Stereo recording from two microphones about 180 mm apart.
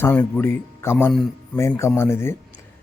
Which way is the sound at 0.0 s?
10° left (ahead or behind).